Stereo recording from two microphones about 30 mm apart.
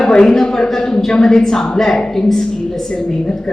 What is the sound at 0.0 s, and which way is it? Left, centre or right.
A man's voice, left.